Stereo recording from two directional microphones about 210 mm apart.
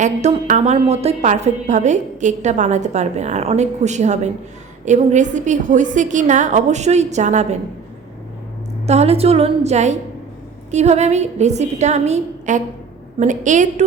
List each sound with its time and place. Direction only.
0.0 s a woman's voice: 35° right (ahead or behind)
8.9 s a woman's voice: 30° right (ahead or behind)